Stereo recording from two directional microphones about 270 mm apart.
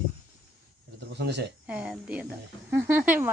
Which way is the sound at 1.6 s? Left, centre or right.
Centre.